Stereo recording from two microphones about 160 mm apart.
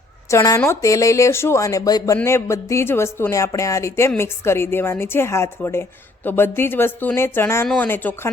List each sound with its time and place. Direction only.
0.3 s speech: 20° left (ahead or behind)